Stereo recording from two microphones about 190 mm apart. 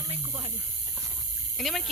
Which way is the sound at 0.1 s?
30° right (ahead or behind).